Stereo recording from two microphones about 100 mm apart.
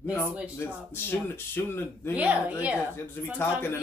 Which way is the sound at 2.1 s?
15° right (ahead or behind).